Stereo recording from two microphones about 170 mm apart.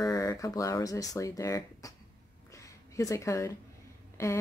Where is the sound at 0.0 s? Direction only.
20° left (ahead or behind).